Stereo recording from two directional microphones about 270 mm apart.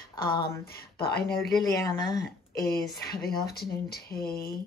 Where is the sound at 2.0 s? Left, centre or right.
Centre.